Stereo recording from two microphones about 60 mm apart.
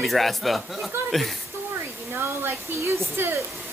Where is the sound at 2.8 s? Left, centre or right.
Right.